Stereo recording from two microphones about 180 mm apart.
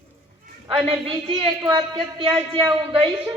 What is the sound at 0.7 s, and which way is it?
A man's voice, 30° right (ahead or behind).